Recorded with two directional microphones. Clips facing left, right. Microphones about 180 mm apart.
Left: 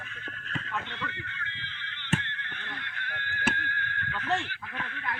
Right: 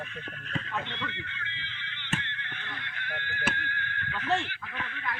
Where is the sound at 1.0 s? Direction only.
20° right (ahead or behind).